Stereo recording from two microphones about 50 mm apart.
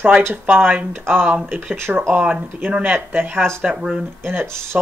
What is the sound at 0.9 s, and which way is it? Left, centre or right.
Speech, right.